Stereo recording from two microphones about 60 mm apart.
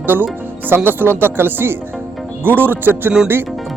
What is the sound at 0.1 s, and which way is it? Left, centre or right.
Speech, right.